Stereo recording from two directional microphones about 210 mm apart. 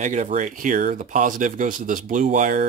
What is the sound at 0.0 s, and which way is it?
Speech, 35° right (ahead or behind).